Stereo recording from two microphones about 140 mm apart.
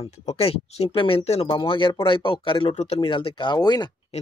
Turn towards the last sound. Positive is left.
turn(degrees=30)  # may be behind; listen again after turning